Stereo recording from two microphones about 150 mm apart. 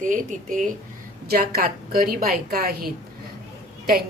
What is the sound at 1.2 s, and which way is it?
A woman's voice, 90° right.